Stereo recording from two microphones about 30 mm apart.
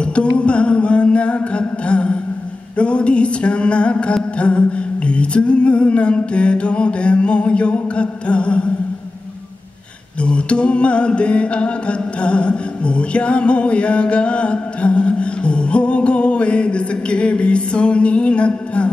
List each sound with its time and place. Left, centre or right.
0.0 s music: left
10.2 s music: left